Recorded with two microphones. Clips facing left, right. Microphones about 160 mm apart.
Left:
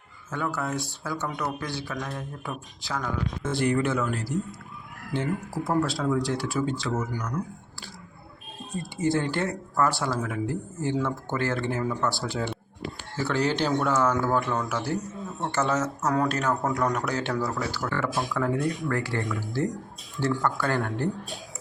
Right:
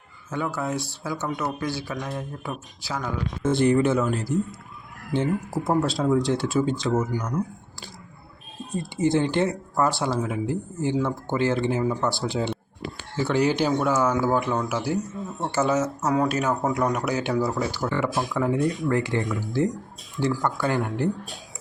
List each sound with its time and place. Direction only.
0.3 s speech: 15° right (ahead or behind)
2.0 s speech: 20° right (ahead or behind)
2.4 s speech: 10° right (ahead or behind)
3.4 s speech: 25° right (ahead or behind)
8.7 s speech: 20° right (ahead or behind)